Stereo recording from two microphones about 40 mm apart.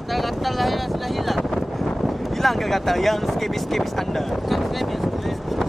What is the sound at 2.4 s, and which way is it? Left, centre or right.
Speech, centre.